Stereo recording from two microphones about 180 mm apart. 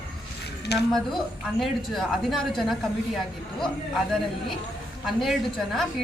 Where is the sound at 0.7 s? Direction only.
65° left (ahead or behind).